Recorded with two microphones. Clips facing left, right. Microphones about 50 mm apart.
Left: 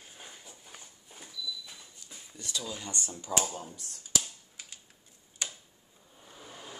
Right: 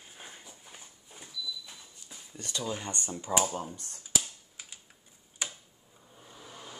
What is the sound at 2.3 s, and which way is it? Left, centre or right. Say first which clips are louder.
Speech: right 3 dB; right.